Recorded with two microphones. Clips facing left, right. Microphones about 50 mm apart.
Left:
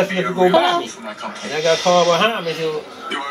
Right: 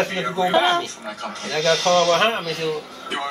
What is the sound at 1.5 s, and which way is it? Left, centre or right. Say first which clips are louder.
Speech: left 3 dB; left.